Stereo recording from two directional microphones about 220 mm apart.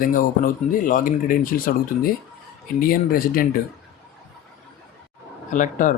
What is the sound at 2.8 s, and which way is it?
Speech, 40° left (ahead or behind).